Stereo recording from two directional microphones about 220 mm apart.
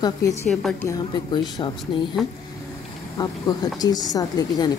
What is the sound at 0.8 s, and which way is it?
Speech, 20° left (ahead or behind).